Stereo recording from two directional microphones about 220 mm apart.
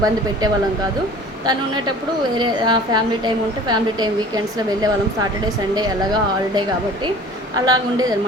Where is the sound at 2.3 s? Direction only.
20° right (ahead or behind).